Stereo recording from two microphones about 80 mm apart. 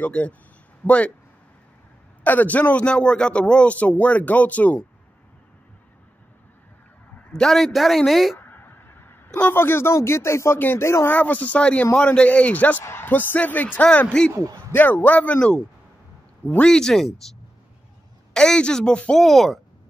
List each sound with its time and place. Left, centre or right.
0.0 s a man's voice: centre
2.2 s a man's voice: left
7.2 s a sound: centre
7.4 s speech: centre
8.4 s a sound: left
9.5 s speech: left
11.1 s a man's voice: left
13.8 s speech: centre
14.7 s a man's voice: left
16.4 s speech: centre
18.3 s speech: centre
19.2 s speech: centre